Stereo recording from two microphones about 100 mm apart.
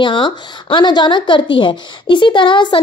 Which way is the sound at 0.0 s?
55° left (ahead or behind).